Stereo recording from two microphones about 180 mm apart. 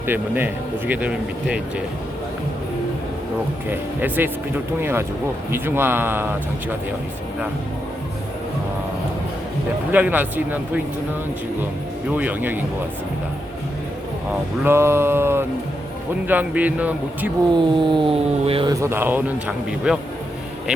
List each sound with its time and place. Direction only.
0.1 s speech: 10° right (ahead or behind)
3.7 s speech: 10° right (ahead or behind)
9.9 s speech: 10° right (ahead or behind)
12.1 s speech: 10° right (ahead or behind)
14.6 s speech: 15° right (ahead or behind)
17.6 s speech: 25° right (ahead or behind)
18.7 s speech: 15° right (ahead or behind)